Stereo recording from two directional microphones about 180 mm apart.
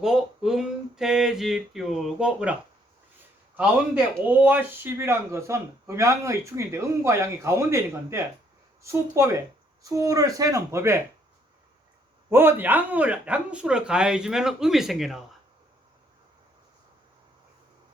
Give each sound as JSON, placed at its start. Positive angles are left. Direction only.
{"t": 0.0, "sound": "a sound", "side_deg": -5}
{"t": 3.6, "sound": "speech", "side_deg": -10}
{"t": 12.3, "sound": "speech", "side_deg": -15}